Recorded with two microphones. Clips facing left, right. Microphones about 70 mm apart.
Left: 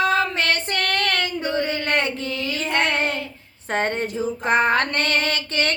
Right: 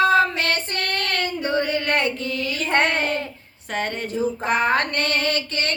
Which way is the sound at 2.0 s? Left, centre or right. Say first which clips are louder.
Right 1 dB; left.